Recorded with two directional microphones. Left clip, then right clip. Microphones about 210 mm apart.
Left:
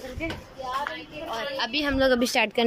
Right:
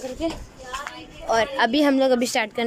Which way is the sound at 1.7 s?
30° right (ahead or behind).